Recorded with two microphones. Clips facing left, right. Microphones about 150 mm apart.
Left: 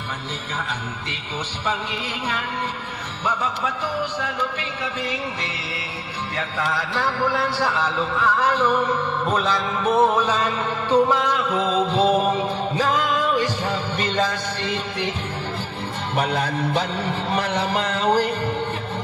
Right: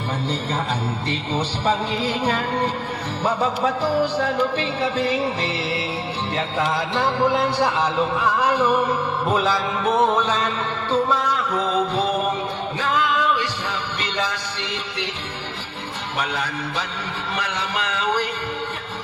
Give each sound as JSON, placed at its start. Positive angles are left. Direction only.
{"t": 1.6, "sound": "music", "side_deg": -35}
{"t": 6.3, "sound": "speech", "side_deg": -25}
{"t": 12.7, "sound": "music", "side_deg": 40}
{"t": 16.1, "sound": "music", "side_deg": 55}
{"t": 17.3, "sound": "a sound", "side_deg": 55}